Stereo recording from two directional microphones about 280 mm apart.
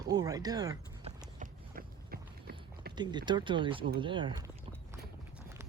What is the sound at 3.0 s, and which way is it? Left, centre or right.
Speech, centre.